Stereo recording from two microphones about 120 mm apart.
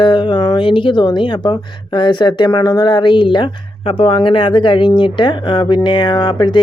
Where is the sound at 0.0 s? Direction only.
40° left (ahead or behind).